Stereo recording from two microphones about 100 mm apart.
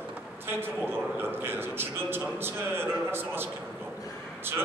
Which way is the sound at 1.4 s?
20° right (ahead or behind).